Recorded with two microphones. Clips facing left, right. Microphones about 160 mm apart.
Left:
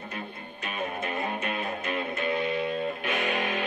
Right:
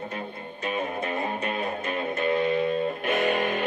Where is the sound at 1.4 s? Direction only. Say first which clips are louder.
Right 3 dB; 40° right (ahead or behind).